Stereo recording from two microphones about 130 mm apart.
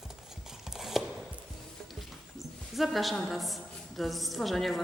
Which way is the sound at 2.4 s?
Centre (ahead or behind).